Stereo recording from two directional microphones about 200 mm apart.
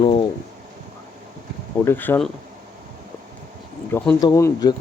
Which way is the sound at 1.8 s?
10° left (ahead or behind).